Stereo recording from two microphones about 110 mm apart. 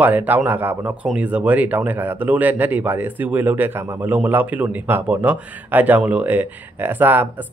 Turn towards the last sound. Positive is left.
turn(degrees=-15)  # may be behind; listen again after turning